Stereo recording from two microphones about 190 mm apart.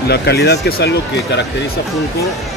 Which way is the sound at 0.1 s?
60° left (ahead or behind).